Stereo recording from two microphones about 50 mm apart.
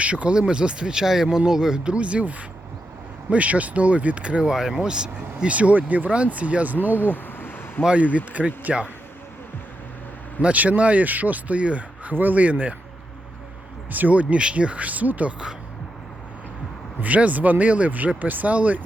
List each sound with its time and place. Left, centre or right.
0.0 s speech: right
4.4 s speech: centre; by 6.7 s right
7.0 s a sound: left
7.9 s speech: right
10.4 s speech: right
13.9 s speech: right
17.0 s speech: right